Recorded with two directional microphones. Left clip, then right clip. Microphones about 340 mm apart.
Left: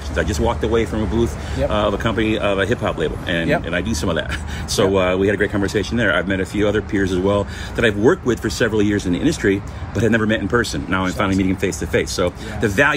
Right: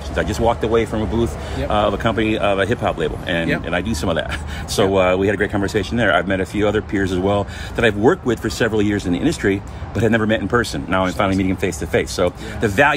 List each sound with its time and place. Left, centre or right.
0.1 s speech: centre